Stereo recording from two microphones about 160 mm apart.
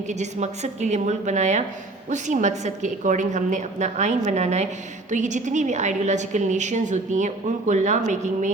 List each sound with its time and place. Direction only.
0.1 s a woman's voice: 45° right (ahead or behind)